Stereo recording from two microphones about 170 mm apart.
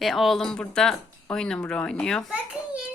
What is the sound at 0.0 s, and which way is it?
Speech, centre (ahead or behind).